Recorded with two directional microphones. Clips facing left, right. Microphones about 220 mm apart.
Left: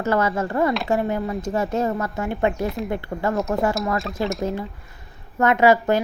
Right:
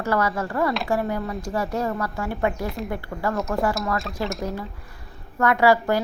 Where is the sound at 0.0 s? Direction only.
25° left (ahead or behind).